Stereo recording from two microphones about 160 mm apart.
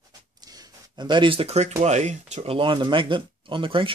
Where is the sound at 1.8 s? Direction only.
45° right (ahead or behind).